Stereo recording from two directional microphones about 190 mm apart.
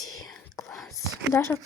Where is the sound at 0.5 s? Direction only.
Centre (ahead or behind).